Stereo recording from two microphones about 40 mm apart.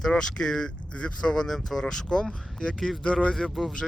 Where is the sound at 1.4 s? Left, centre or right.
Centre.